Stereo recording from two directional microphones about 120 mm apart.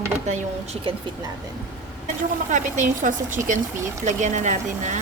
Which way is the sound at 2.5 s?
90° right.